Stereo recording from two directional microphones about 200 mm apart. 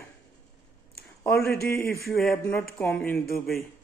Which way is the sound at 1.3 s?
50° left (ahead or behind).